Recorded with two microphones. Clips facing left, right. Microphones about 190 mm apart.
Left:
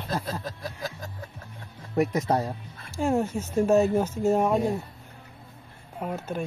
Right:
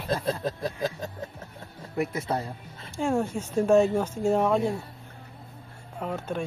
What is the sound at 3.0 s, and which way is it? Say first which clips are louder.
Speech: left 1 dB; 5° left (ahead or behind).